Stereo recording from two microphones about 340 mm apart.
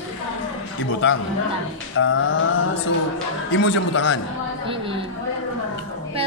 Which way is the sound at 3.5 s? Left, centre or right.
Left.